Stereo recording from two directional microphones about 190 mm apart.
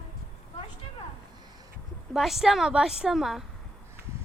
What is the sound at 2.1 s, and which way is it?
A woman's voice, centre (ahead or behind).